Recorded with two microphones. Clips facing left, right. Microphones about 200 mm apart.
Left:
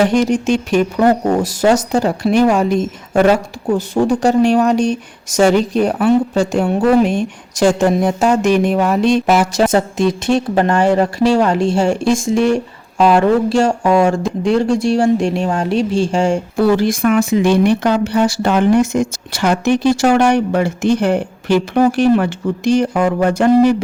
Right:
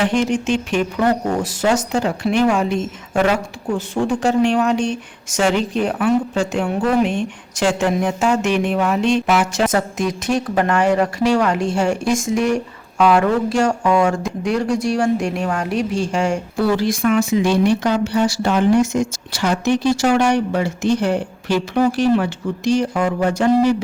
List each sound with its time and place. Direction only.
0.0 s speech: 40° left (ahead or behind)
16.6 s speech: 50° left (ahead or behind)